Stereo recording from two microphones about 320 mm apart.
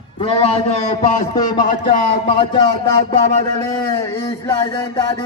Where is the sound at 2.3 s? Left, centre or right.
Centre.